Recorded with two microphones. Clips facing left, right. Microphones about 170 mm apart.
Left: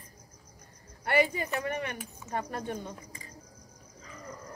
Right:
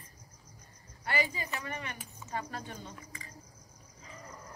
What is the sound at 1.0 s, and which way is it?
A woman's voice, 60° left (ahead or behind).